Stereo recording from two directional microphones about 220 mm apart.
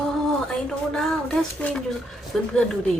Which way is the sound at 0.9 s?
5° left (ahead or behind).